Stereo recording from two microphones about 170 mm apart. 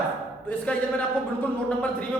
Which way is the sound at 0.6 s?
5° left (ahead or behind).